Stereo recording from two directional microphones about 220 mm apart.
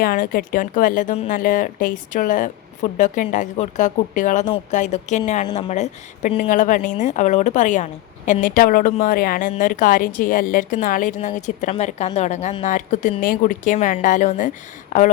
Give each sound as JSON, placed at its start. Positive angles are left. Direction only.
{"t": 0.0, "sound": "speech", "side_deg": 40}